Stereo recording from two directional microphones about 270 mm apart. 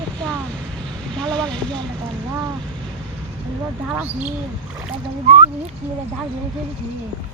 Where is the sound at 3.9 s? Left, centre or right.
Centre.